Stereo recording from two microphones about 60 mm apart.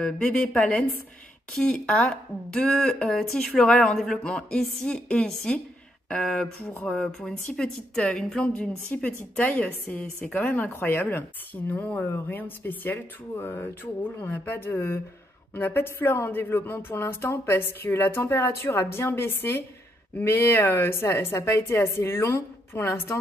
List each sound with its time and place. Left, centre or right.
0.0 s speech: centre
4.2 s speech: centre
8.5 s a woman's voice: left